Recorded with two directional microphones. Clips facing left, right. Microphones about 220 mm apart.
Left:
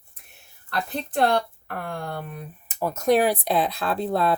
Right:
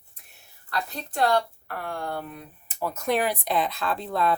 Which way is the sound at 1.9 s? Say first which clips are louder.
Right 2 dB; 20° left (ahead or behind).